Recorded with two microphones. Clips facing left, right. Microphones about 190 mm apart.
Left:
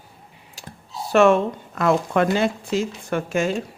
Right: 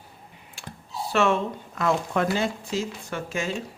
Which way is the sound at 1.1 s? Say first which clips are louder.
Left 7 dB; 50° left (ahead or behind).